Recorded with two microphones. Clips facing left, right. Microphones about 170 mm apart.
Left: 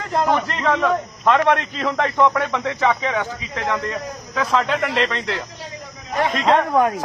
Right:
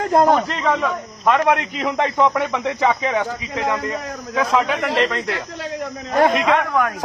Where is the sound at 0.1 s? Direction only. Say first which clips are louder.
Right 4 dB; 45° right (ahead or behind).